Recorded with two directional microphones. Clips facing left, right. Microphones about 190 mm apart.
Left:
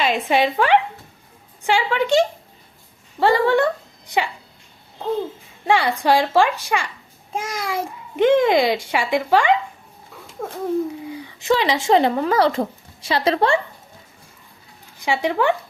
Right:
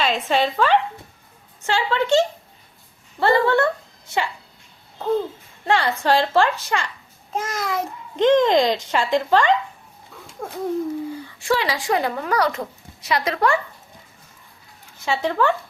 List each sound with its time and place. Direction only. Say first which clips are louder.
0.0 s a child's voice: left 2 dB; 15° left (ahead or behind)
5.6 s a child's voice: left 2 dB; 10° left (ahead or behind)
10.4 s babbling: left 3 dB; centre (ahead or behind)
11.1 s speech: left 2 dB; 20° left (ahead or behind)
14.9 s speech: left 1 dB; 15° left (ahead or behind)